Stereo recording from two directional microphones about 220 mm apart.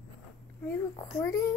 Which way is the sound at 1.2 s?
15° left (ahead or behind).